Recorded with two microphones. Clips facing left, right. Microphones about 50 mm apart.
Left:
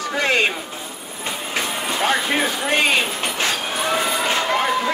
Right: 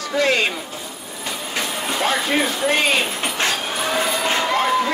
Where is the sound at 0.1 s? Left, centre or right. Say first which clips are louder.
Right 1 dB; centre.